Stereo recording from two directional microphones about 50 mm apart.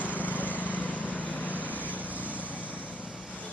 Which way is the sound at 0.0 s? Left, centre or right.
Left.